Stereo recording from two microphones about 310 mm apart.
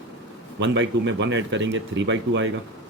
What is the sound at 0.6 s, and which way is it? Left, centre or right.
Speech, right.